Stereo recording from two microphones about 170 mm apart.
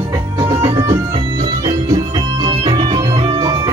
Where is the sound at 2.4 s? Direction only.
30° right (ahead or behind).